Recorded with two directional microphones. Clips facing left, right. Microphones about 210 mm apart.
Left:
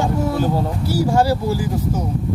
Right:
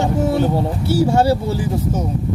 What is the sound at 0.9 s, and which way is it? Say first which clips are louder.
Speech: right 2 dB; 25° right (ahead or behind).